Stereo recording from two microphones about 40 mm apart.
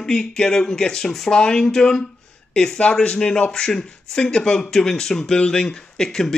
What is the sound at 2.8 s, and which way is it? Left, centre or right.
A man's voice, left.